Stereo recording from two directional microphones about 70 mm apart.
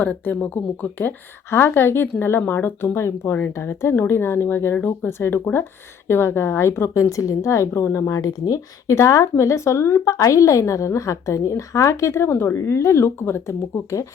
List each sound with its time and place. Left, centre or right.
0.0 s a woman's voice: left
8.1 s a woman's voice: left